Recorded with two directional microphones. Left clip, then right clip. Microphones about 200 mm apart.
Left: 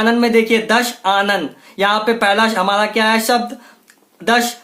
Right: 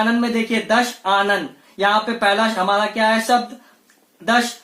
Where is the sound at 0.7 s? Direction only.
30° left (ahead or behind).